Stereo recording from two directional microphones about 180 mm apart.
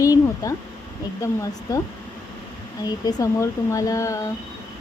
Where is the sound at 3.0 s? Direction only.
20° left (ahead or behind).